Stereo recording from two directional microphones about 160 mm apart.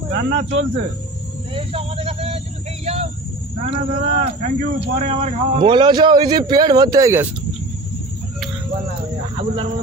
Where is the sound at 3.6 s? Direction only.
40° right (ahead or behind); by 7.3 s 20° right (ahead or behind).